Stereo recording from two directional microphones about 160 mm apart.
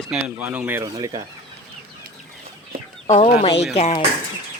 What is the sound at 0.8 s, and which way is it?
Speech, 25° right (ahead or behind).